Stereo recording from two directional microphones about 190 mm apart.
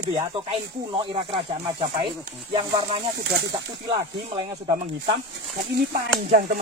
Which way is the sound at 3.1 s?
65° right (ahead or behind).